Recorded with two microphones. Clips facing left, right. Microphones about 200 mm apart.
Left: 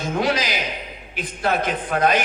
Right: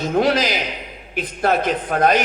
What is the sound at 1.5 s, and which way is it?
Speech, 50° left (ahead or behind).